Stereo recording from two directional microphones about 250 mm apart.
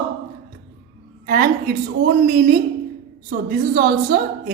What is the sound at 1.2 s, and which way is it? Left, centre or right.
Speech, right.